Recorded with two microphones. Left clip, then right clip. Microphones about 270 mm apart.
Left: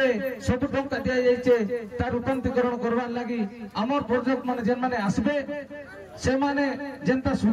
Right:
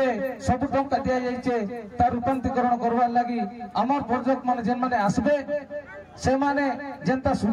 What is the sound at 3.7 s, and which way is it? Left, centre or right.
A man's voice, right.